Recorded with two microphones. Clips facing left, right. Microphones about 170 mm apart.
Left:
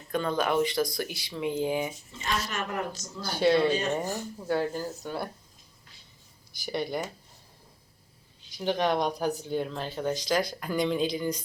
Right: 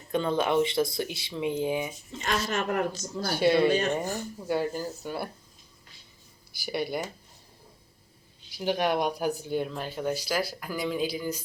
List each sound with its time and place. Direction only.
0.1 s speech: 25° right (ahead or behind)
2.5 s a man's voice: 55° right (ahead or behind)
3.2 s speech: 10° right (ahead or behind)
3.7 s speech: 55° right (ahead or behind)
4.4 s speech: 10° right (ahead or behind)
6.5 s speech: 5° right (ahead or behind)
8.5 s speech: 10° right (ahead or behind)